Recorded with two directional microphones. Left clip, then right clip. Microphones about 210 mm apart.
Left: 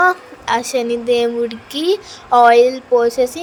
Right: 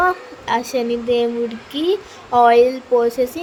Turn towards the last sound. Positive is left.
turn(degrees=20)  # may be behind; listen again after turning